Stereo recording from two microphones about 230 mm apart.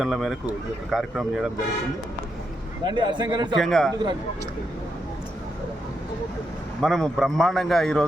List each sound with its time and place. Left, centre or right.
0.0 s a man's voice: centre
2.8 s a man's voice: centre
3.6 s a man's voice: centre
6.8 s a man's voice: centre